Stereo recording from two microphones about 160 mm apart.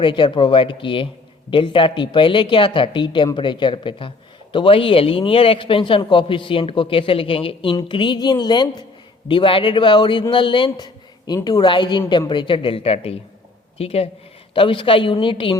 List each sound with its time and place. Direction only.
0.0 s a man's voice: 30° left (ahead or behind)